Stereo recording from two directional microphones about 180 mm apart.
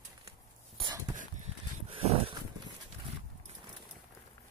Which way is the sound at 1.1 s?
35° right (ahead or behind).